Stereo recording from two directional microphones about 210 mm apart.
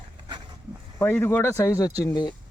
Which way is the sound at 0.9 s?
10° left (ahead or behind).